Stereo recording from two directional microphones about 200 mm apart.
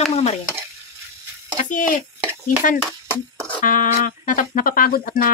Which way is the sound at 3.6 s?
40° left (ahead or behind).